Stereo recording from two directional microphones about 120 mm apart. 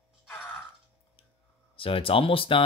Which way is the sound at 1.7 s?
50° left (ahead or behind).